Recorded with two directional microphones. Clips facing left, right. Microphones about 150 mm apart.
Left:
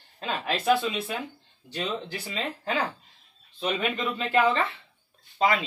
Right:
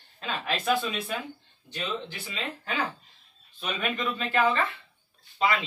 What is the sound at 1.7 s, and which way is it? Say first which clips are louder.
Speech: left 2 dB; 35° left (ahead or behind).